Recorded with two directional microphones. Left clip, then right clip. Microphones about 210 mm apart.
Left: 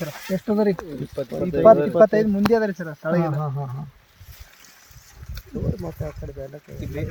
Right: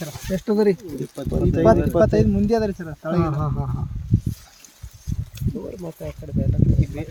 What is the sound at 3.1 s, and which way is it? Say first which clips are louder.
Speech: right 1 dB; 10° right (ahead or behind).